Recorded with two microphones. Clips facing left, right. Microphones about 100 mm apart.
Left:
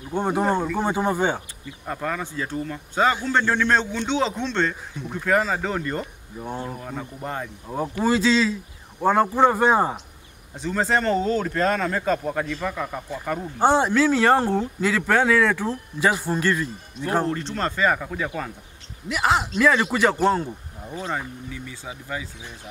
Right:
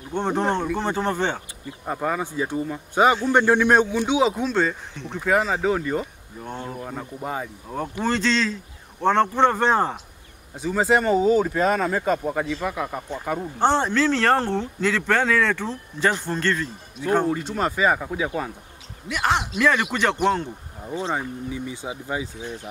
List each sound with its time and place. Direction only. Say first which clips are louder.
0.1 s speech: left 1 dB; 5° left (ahead or behind)
1.9 s speech: right 3 dB; 15° right (ahead or behind)
4.9 s speech: even; 5° left (ahead or behind)
6.4 s speech: left 2 dB; 10° left (ahead or behind)
6.8 s speech: right 1 dB; 5° right (ahead or behind)
8.0 s speech: left 3 dB; 5° left (ahead or behind)
10.5 s speech: right 2 dB; 5° right (ahead or behind)
13.6 s speech: left 2 dB; 10° left (ahead or behind)
17.3 s speech: right 2 dB; 10° right (ahead or behind)
19.0 s speech: left 1 dB; 5° left (ahead or behind)
21.1 s speech: right 3 dB; 15° right (ahead or behind)